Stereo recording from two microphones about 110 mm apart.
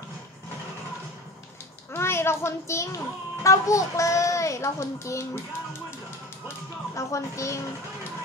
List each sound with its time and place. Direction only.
1.9 s a child's voice: 25° left (ahead or behind)
3.4 s child singing: 30° left (ahead or behind)
7.0 s child singing: 30° left (ahead or behind)